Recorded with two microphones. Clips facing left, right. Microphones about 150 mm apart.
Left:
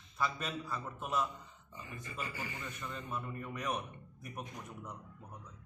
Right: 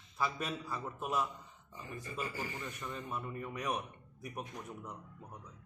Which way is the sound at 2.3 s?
40° right (ahead or behind).